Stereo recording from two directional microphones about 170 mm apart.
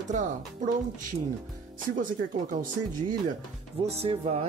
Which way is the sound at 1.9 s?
50° right (ahead or behind).